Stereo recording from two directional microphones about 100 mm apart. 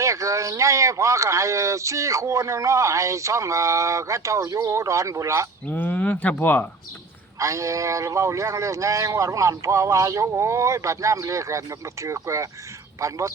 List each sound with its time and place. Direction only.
0.0 s a man's voice: 30° right (ahead or behind)
5.7 s speech: 15° left (ahead or behind)
7.3 s a man's voice: 30° right (ahead or behind)